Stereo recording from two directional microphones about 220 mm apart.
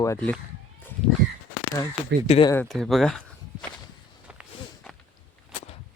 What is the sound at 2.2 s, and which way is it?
Speech, 25° left (ahead or behind).